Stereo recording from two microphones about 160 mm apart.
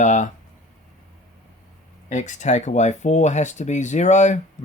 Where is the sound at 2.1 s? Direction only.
50° left (ahead or behind).